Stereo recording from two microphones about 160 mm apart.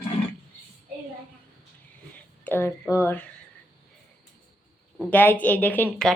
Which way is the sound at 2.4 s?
15° left (ahead or behind).